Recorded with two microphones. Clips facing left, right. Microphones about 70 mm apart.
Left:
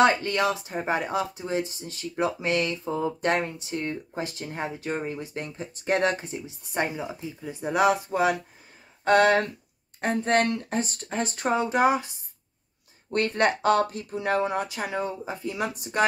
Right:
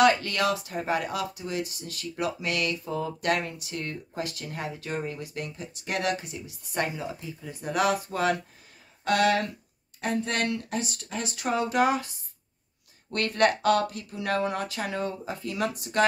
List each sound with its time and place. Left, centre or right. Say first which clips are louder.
0.0 s speech: left 1 dB; left
9.0 s speech: left 4 dB; left